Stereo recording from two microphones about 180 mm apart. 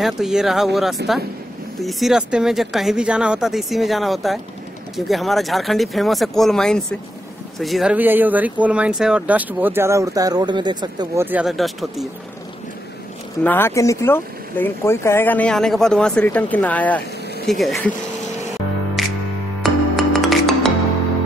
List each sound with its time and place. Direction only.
0.0 s speech: centre (ahead or behind)
1.0 s speech: 70° right (ahead or behind)
1.8 s speech: centre (ahead or behind); by 11.2 s 25° right (ahead or behind)
11.2 s speech: 5° right (ahead or behind)
13.4 s speech: 10° left (ahead or behind)
19.0 s music: centre (ahead or behind)